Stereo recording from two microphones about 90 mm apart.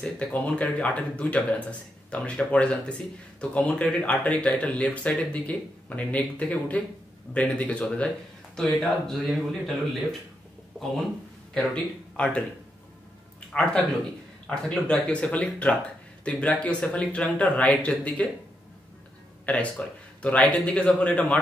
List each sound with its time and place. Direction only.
0.0 s speech: 10° left (ahead or behind)
11.7 s speech: 10° left (ahead or behind)
13.5 s speech: 10° left (ahead or behind)
19.4 s speech: 15° left (ahead or behind)